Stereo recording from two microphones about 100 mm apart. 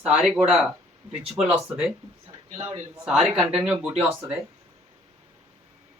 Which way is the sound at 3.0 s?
Centre (ahead or behind).